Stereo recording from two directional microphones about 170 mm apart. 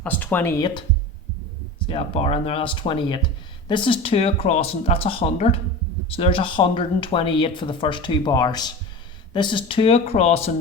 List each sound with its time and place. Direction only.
0.0 s speech: 10° left (ahead or behind)
1.9 s speech: 35° left (ahead or behind)